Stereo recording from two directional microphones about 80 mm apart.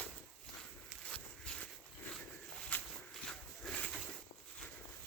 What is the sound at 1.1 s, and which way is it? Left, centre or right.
Walk, centre.